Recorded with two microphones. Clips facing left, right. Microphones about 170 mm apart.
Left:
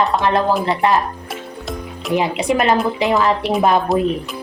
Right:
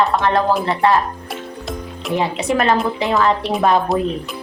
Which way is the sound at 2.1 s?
15° left (ahead or behind).